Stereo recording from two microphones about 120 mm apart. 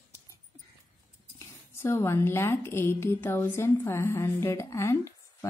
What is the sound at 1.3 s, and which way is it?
A woman's voice, 20° left (ahead or behind).